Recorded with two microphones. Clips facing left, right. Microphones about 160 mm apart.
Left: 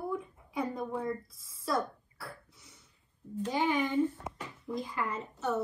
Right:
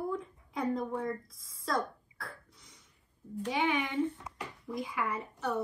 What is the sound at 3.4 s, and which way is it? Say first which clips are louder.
Speech: left 1 dB; 70° right (ahead or behind).